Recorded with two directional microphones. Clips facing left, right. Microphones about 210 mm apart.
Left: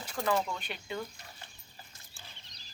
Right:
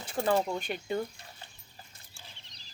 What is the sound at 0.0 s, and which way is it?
Speech, 25° right (ahead or behind).